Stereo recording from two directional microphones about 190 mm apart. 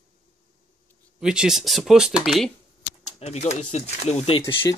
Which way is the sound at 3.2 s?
35° left (ahead or behind).